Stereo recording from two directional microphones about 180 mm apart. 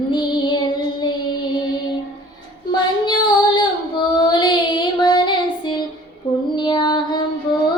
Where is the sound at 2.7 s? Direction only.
25° left (ahead or behind).